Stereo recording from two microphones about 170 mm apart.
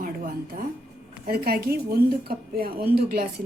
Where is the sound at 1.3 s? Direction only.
60° right (ahead or behind).